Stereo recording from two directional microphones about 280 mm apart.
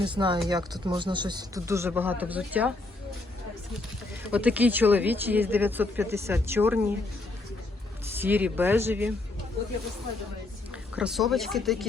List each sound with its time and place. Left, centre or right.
0.0 s speech: centre
4.3 s speech: centre
8.1 s speech: centre
10.7 s speech: centre